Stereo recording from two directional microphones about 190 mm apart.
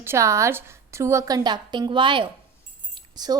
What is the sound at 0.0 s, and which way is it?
A woman's voice, 15° right (ahead or behind).